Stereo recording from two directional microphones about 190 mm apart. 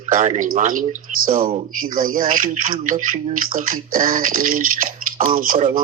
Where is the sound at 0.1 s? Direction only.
45° right (ahead or behind).